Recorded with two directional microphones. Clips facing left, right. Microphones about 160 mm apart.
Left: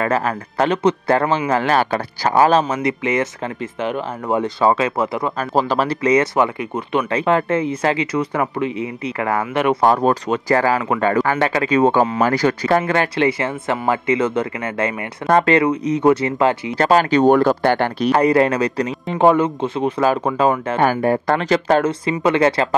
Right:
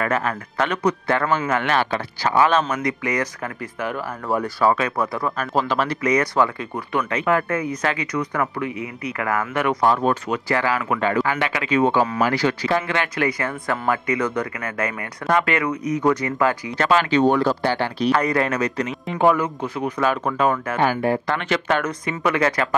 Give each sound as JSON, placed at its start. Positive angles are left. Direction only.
{"t": 0.0, "sound": "speech", "side_deg": 30}
{"t": 2.7, "sound": "speech", "side_deg": 25}
{"t": 9.8, "sound": "speech", "side_deg": 40}
{"t": 13.2, "sound": "speech", "side_deg": 25}
{"t": 16.8, "sound": "speech", "side_deg": 40}
{"t": 18.1, "sound": "speech", "side_deg": 30}
{"t": 20.8, "sound": "speech", "side_deg": 45}